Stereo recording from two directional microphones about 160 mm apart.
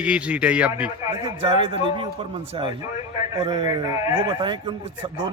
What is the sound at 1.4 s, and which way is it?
Speech, 30° right (ahead or behind).